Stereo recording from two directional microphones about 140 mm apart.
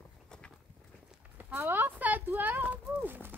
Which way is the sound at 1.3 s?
15° right (ahead or behind).